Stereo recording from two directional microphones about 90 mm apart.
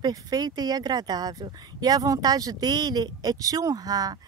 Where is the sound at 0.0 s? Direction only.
45° right (ahead or behind).